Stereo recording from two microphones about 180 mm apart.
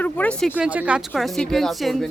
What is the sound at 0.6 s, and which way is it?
A woman's voice, 10° right (ahead or behind).